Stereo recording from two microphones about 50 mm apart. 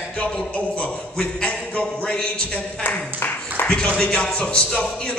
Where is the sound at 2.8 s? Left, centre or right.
Left.